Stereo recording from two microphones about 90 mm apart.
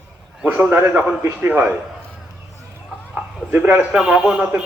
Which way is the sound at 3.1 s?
20° right (ahead or behind).